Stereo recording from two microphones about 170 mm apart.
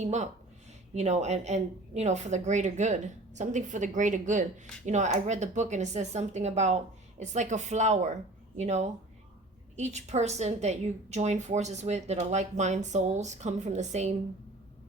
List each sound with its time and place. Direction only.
0.0 s a woman's voice: 40° right (ahead or behind)